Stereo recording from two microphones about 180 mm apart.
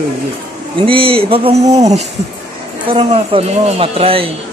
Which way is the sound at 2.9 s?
30° right (ahead or behind).